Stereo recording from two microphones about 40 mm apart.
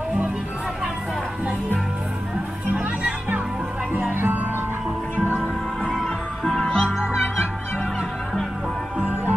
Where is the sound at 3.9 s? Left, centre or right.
Right.